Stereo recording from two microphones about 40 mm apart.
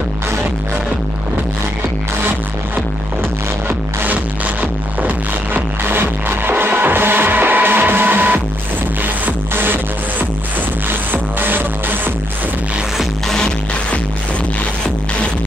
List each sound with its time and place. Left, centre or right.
3.6 s music: right
5.9 s music: right